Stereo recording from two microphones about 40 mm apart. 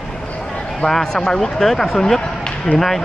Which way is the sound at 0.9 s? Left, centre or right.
Centre.